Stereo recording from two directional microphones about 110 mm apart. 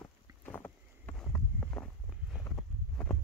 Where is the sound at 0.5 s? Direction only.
20° left (ahead or behind).